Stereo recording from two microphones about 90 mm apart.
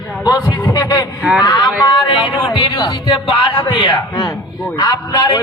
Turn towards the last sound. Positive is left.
turn(degrees=50)  # may be behind; listen again after turning